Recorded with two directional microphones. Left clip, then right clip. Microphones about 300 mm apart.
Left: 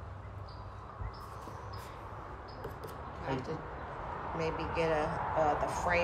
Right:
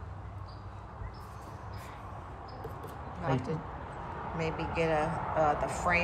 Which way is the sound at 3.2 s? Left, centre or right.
Centre.